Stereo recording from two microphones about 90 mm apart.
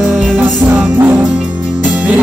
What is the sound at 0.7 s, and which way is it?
Music, 15° right (ahead or behind).